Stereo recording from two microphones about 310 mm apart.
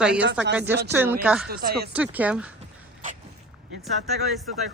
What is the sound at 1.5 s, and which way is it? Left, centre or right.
Speech, right.